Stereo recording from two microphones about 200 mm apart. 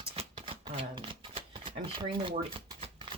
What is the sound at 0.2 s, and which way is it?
Shuffling cards, 30° right (ahead or behind).